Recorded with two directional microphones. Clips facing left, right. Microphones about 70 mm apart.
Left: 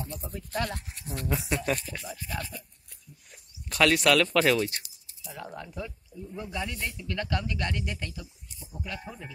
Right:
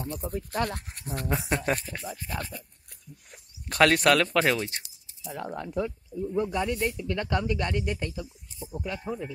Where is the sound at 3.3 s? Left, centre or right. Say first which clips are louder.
Right 1 dB; right.